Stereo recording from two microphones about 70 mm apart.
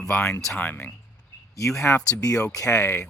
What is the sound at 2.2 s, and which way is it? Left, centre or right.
Speech, left.